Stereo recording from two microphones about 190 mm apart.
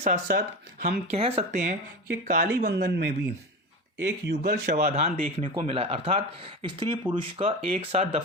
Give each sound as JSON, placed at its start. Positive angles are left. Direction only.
{"t": 0.0, "sound": "speech", "side_deg": -50}
{"t": 1.1, "sound": "speech", "side_deg": -35}
{"t": 2.2, "sound": "speech", "side_deg": -50}
{"t": 4.8, "sound": "speech", "side_deg": -35}